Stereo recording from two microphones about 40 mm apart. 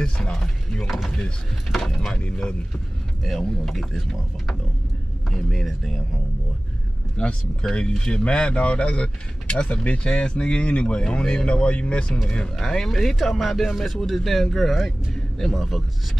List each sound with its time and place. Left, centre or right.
0.0 s speech: centre
0.8 s speech: centre
2.1 s speech: left
3.3 s speech: centre
7.2 s speech: left
10.1 s speech: left
12.5 s speech: centre
14.9 s vehicle: centre
15.5 s speech: centre